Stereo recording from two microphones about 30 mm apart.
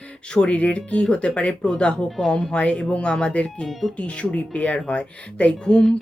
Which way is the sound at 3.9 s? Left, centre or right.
Left.